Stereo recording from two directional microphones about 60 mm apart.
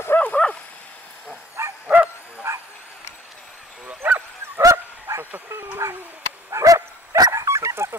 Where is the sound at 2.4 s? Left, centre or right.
Right.